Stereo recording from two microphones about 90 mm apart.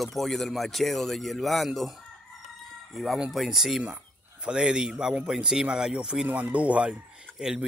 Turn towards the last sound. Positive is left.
turn(degrees=-5)  # may be behind; listen again after turning